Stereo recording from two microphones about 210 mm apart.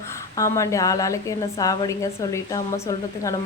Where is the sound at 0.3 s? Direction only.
15° left (ahead or behind).